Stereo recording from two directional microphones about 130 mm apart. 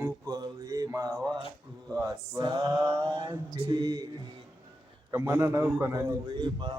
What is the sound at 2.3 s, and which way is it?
Mantra, 35° right (ahead or behind).